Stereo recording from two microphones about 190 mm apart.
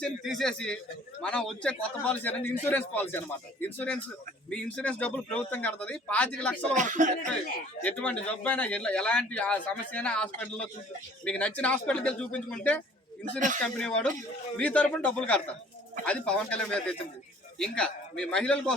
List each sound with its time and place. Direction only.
0.0 s a man's voice: centre (ahead or behind)
6.7 s speech: 40° right (ahead or behind)
7.9 s a man's voice: 5° left (ahead or behind)
13.6 s a man's voice: 5° left (ahead or behind)